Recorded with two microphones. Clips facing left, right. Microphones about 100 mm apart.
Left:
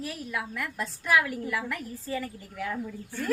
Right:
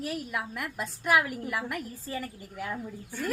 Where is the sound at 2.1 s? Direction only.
30° right (ahead or behind).